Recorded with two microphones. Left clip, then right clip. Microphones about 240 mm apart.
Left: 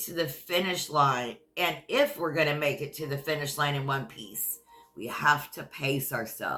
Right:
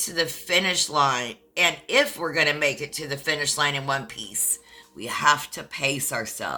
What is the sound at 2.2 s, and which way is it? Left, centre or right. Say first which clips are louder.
Speech: right 5 dB; right.